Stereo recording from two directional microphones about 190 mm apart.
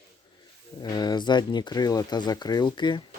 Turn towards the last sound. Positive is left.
turn(degrees=25)  # may be behind; listen again after turning